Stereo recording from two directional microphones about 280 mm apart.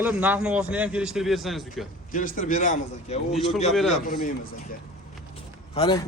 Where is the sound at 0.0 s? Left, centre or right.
Centre.